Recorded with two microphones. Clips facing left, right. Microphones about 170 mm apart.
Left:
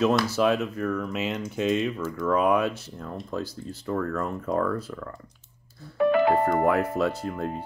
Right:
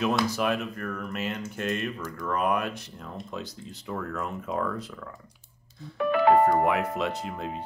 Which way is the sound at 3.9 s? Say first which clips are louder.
Left 5 dB; centre (ahead or behind).